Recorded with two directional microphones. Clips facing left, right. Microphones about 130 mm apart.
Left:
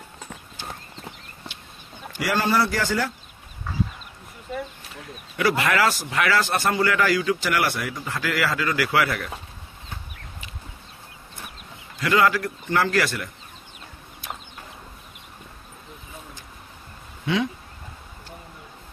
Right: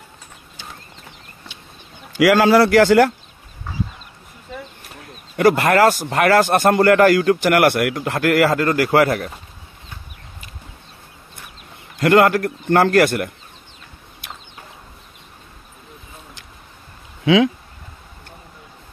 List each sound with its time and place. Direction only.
2.1 s a man's voice: 90° right
5.4 s a man's voice: 50° right (ahead or behind)
12.0 s a man's voice: 55° right (ahead or behind)
17.2 s a sound: 90° right